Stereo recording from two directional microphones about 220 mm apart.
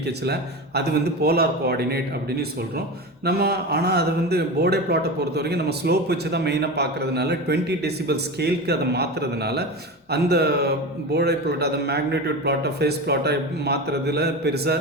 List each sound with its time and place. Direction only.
0.0 s a man's voice: 50° right (ahead or behind)
3.2 s a man's voice: 45° right (ahead or behind)